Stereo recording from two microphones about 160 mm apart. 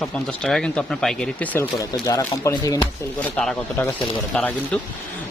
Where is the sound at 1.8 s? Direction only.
25° left (ahead or behind).